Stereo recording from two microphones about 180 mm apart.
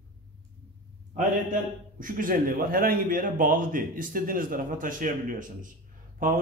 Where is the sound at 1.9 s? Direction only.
50° right (ahead or behind).